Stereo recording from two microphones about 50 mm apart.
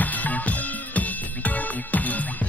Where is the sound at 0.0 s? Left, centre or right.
Left.